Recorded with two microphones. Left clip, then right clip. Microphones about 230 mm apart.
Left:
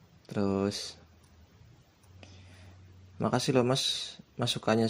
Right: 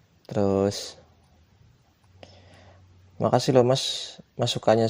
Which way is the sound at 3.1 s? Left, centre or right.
Right.